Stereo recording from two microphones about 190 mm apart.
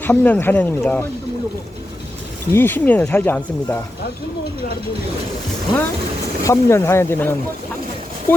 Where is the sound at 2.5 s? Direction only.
10° left (ahead or behind).